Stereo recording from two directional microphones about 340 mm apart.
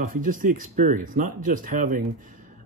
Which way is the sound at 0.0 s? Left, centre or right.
Right.